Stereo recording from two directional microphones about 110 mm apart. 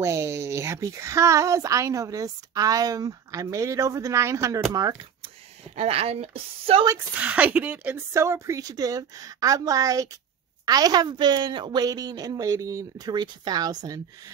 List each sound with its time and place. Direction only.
0.0 s a woman's voice: 25° right (ahead or behind)
5.8 s a woman's voice: 65° right (ahead or behind)
7.2 s speech: 15° right (ahead or behind)
8.1 s a woman's voice: 25° right (ahead or behind)